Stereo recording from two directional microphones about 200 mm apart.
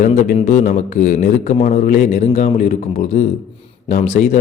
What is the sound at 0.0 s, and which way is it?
A man's voice, 40° left (ahead or behind).